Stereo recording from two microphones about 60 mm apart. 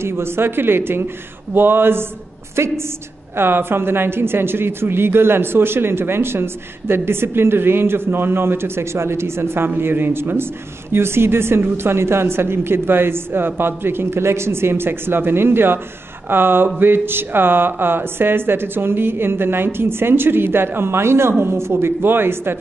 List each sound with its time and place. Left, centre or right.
0.0 s a woman's voice: right